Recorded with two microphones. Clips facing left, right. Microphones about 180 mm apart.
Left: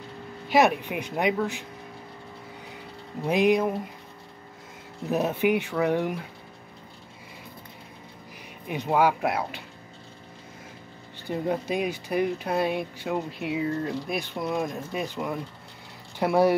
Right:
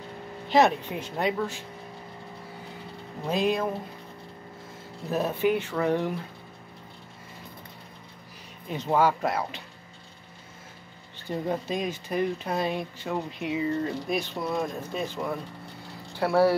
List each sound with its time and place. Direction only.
0.5 s speech: 15° left (ahead or behind)
3.3 s speech: 15° left (ahead or behind)
5.1 s speech: 15° left (ahead or behind)
8.6 s speech: 15° left (ahead or behind)
11.2 s speech: 10° left (ahead or behind)